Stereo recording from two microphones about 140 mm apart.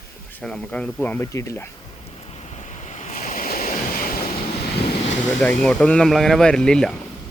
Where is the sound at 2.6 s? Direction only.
55° left (ahead or behind); by 4.2 s 90° left.